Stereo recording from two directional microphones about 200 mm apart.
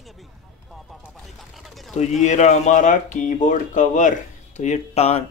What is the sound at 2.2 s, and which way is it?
Speech, 35° left (ahead or behind).